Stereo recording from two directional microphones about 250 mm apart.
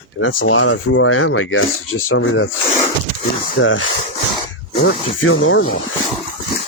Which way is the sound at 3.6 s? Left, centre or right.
Left.